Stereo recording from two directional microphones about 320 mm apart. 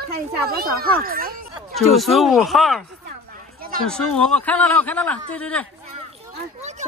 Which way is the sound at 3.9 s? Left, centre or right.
Centre.